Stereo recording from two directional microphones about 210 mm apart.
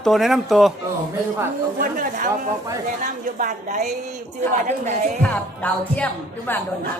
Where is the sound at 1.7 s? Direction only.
40° right (ahead or behind).